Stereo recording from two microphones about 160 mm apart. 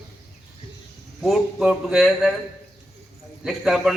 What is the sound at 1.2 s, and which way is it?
A man's voice, centre (ahead or behind).